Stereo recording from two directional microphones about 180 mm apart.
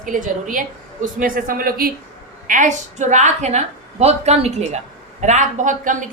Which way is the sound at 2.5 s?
45° right (ahead or behind).